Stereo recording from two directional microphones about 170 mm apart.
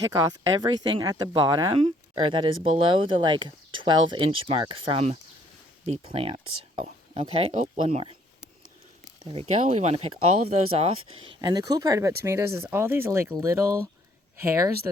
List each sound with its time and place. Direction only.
0.1 s speech: 20° right (ahead or behind)
9.2 s speech: 35° right (ahead or behind)
11.3 s speech: 20° right (ahead or behind)